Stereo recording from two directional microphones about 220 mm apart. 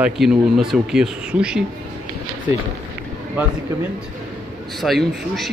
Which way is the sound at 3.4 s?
5° right (ahead or behind).